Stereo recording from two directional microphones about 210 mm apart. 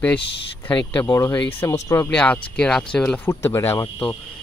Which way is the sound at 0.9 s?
15° left (ahead or behind).